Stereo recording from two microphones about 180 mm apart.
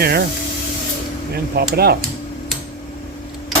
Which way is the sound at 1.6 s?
60° right (ahead or behind).